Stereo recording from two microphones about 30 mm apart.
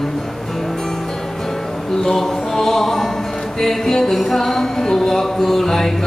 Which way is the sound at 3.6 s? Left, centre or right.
Centre.